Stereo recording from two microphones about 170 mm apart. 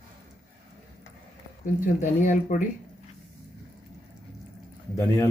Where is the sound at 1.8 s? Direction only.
45° left (ahead or behind).